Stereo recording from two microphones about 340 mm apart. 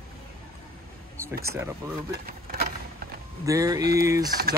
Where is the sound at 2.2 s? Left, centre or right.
Right.